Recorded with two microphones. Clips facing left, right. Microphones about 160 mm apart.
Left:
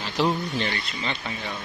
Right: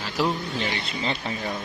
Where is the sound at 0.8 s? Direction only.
30° right (ahead or behind).